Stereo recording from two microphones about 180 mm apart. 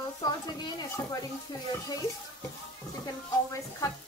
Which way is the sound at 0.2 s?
20° left (ahead or behind).